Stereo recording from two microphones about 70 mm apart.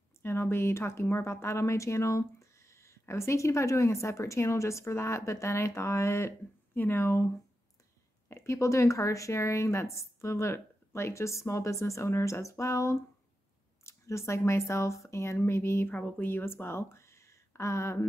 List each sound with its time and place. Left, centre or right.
0.2 s speech: left
8.3 s speech: left